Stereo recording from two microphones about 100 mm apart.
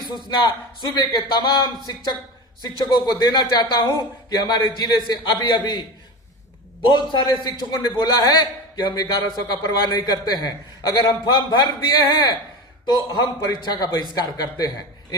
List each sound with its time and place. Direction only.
0.4 s a man's voice: 50° left (ahead or behind)
6.8 s a man's voice: 45° left (ahead or behind)